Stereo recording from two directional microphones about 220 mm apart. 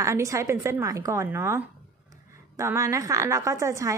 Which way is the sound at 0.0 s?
15° right (ahead or behind).